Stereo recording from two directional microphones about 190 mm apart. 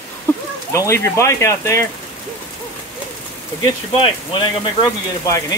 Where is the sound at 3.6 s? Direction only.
25° left (ahead or behind).